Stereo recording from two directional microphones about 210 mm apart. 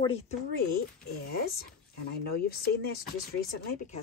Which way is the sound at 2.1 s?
50° left (ahead or behind).